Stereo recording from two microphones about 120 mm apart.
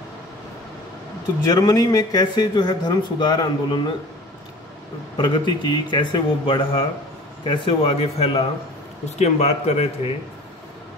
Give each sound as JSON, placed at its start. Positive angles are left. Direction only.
{"t": 1.4, "sound": "speech", "side_deg": 30}
{"t": 5.1, "sound": "speech", "side_deg": 40}
{"t": 9.2, "sound": "speech", "side_deg": 65}